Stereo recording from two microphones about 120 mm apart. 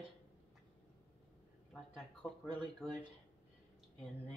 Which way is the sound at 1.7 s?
5° left (ahead or behind).